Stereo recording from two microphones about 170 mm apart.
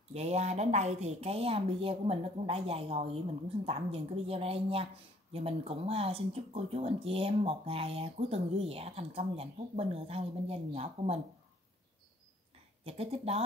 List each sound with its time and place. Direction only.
0.1 s speech: 40° right (ahead or behind)
12.8 s speech: 35° right (ahead or behind)